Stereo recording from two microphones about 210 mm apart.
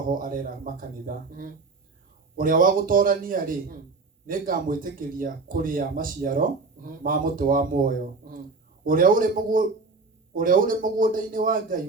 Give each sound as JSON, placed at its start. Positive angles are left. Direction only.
{"t": 0.1, "sound": "speech", "side_deg": -40}